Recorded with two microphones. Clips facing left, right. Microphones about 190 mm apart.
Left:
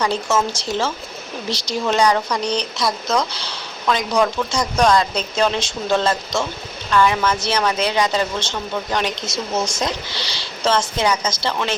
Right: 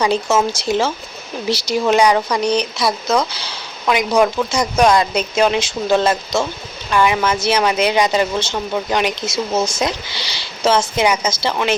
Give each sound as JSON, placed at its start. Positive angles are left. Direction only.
{"t": 0.0, "sound": "speech", "side_deg": -10}